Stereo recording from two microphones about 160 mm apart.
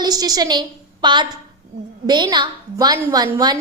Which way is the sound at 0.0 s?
25° right (ahead or behind).